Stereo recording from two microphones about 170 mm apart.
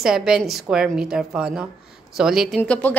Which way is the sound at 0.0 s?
5° right (ahead or behind).